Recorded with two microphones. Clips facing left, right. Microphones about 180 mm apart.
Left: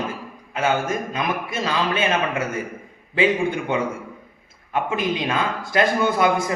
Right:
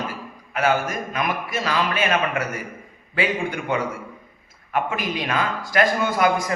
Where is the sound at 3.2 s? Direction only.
25° left (ahead or behind).